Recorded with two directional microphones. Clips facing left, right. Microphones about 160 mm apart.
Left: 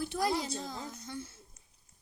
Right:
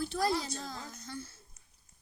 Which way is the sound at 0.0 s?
15° left (ahead or behind).